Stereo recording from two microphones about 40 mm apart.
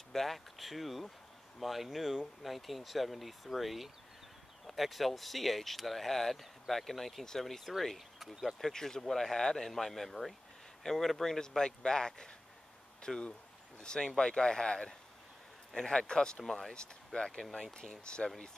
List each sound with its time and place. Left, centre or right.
0.1 s speech: centre
8.2 s speech: centre
8.5 s speech: centre
16.4 s speech: centre
16.7 s speech: left